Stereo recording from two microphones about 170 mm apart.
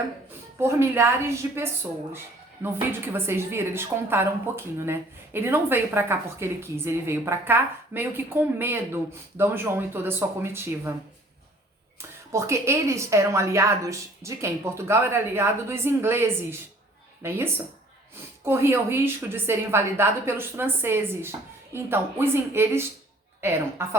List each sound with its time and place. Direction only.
0.6 s speech: 15° right (ahead or behind)
12.3 s speech: 15° right (ahead or behind)